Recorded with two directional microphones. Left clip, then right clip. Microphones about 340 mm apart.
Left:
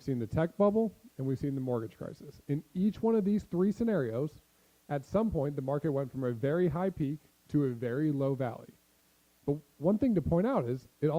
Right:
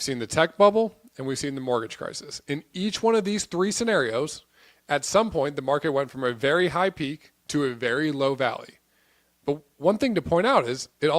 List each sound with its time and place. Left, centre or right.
0.0 s speech: centre
0.7 s speech: right
1.1 s speech: centre